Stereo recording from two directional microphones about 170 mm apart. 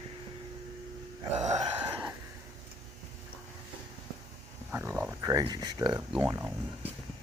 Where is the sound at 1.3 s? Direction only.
40° right (ahead or behind).